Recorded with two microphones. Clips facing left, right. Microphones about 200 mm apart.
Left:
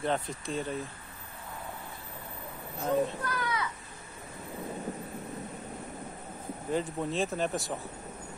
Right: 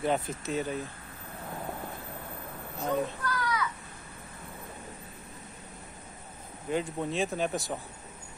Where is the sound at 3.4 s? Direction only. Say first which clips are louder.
Right 2 dB; 25° left (ahead or behind).